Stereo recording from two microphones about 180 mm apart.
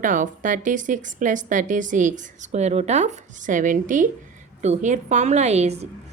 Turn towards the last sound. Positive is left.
turn(degrees=-35)  # may be behind; listen again after turning